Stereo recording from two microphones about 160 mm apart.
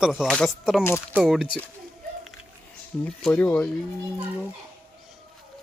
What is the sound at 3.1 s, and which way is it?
Speech, 5° left (ahead or behind).